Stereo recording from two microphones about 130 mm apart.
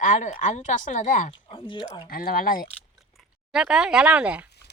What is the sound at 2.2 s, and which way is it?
Speech, 90° left.